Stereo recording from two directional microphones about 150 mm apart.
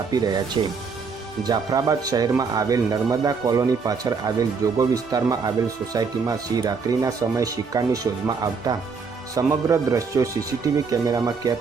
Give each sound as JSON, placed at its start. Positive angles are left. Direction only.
{"t": 0.1, "sound": "speech", "side_deg": -25}